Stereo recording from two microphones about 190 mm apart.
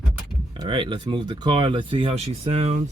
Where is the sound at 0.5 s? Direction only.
25° right (ahead or behind).